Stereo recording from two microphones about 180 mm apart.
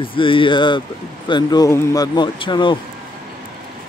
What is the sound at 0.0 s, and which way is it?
Speech, 30° left (ahead or behind).